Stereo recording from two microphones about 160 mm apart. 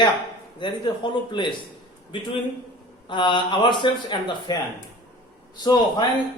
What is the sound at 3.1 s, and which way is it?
A man's voice, 30° left (ahead or behind).